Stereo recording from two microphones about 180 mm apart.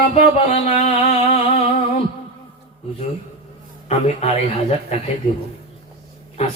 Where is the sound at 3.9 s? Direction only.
35° left (ahead or behind).